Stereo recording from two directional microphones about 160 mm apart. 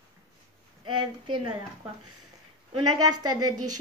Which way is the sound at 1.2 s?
30° right (ahead or behind).